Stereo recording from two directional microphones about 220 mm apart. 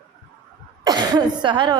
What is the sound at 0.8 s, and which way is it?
Speech, 20° right (ahead or behind).